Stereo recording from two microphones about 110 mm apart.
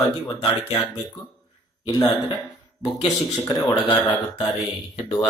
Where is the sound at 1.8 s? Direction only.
40° left (ahead or behind).